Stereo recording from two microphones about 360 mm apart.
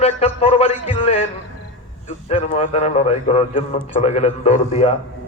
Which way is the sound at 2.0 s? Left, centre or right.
Centre.